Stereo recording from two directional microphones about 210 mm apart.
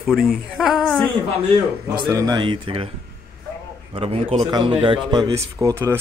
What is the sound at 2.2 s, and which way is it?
Speech, 20° right (ahead or behind).